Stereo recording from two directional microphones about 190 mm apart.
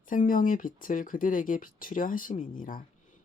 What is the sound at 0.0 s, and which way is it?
Speech, 45° left (ahead or behind).